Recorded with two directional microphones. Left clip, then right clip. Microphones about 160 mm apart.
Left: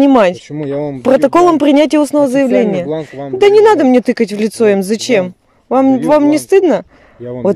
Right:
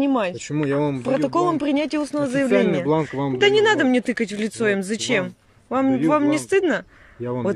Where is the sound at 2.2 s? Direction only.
25° left (ahead or behind).